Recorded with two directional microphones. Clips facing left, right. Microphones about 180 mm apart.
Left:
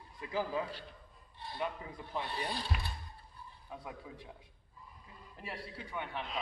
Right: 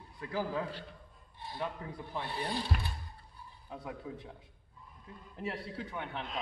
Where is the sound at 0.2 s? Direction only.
10° left (ahead or behind).